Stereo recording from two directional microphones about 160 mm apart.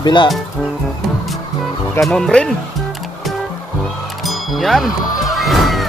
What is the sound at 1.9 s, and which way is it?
Speech, centre (ahead or behind).